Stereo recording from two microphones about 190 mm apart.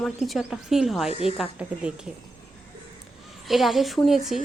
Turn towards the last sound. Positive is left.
turn(degrees=0)  # may be behind; listen again after turning